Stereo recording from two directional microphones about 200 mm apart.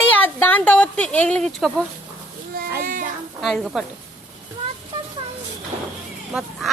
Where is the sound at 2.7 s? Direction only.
45° right (ahead or behind).